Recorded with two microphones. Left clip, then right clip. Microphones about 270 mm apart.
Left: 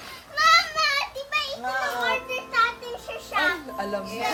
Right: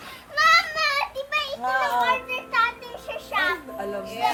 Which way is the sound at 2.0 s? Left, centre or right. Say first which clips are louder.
Right 2 dB; centre.